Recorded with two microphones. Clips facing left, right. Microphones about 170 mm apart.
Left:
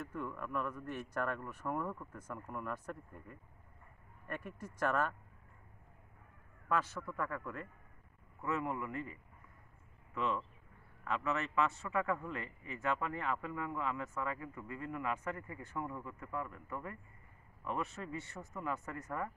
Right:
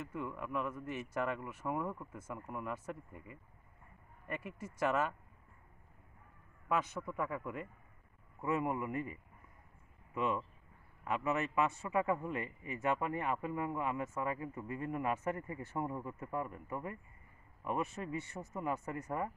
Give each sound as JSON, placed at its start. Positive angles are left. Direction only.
{"t": 0.1, "sound": "speech", "side_deg": -10}
{"t": 6.7, "sound": "a man's voice", "side_deg": -15}